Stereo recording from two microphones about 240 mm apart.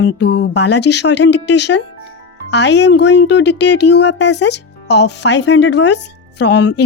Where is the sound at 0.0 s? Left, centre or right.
Left.